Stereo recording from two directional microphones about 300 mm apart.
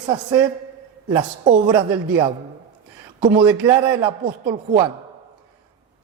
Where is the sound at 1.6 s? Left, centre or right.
Centre.